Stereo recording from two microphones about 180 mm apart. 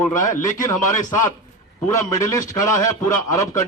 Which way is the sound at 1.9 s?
20° left (ahead or behind).